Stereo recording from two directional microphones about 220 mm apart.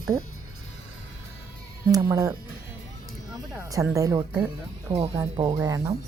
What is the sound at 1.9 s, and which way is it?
Speech, 15° right (ahead or behind).